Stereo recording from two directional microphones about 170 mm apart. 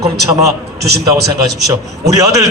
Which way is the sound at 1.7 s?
20° right (ahead or behind).